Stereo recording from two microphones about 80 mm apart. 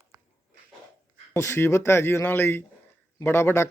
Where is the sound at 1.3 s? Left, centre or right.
Left.